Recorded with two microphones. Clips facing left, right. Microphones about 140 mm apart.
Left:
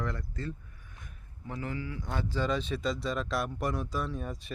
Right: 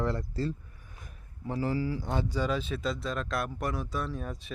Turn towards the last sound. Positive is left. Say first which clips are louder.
# even
turn(degrees=0)  # may be behind; listen again after turning